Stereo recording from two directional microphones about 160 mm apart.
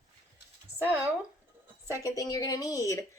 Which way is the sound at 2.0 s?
20° left (ahead or behind).